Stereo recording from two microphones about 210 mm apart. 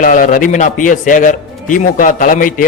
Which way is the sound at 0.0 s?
40° left (ahead or behind).